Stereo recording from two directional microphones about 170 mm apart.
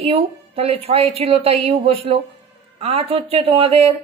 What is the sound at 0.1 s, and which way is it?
A woman's voice, 35° right (ahead or behind).